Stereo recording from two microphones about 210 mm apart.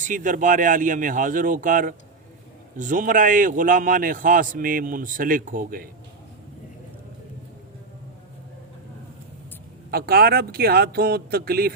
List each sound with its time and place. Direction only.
0.0 s a man's voice: 40° right (ahead or behind)
9.9 s speech: 45° right (ahead or behind)